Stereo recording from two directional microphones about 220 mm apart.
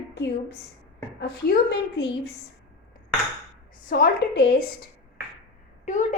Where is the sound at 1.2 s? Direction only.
50° left (ahead or behind).